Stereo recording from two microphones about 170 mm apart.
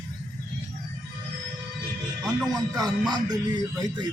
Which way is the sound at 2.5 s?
25° right (ahead or behind).